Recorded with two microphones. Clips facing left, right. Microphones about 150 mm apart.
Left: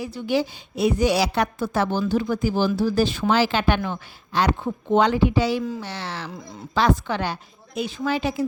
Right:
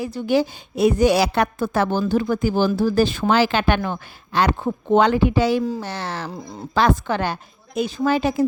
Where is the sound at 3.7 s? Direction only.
45° right (ahead or behind).